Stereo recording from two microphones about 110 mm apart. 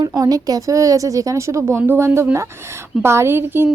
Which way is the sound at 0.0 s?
35° right (ahead or behind).